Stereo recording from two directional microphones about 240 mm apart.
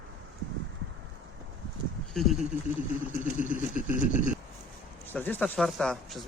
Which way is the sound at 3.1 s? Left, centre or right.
Centre.